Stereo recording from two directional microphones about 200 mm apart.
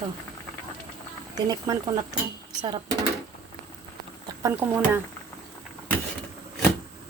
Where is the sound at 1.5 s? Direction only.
15° right (ahead or behind).